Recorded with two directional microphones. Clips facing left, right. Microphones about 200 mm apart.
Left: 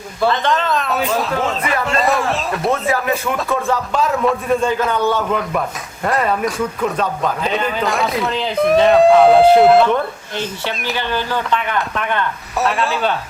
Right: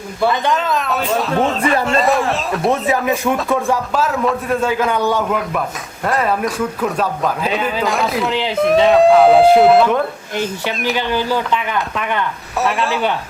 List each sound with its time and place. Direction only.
0.5 s a man's voice: centre (ahead or behind)
1.4 s speech: 30° right (ahead or behind)
1.9 s a man's voice: centre (ahead or behind)
2.8 s speech: 20° right (ahead or behind)
3.7 s a man's voice: 5° right (ahead or behind)
6.1 s a man's voice: centre (ahead or behind)
10.9 s a man's voice: 15° right (ahead or behind)
12.5 s a man's voice: centre (ahead or behind)